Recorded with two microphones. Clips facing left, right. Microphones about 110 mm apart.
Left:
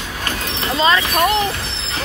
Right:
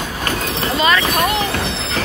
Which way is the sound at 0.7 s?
25° left (ahead or behind).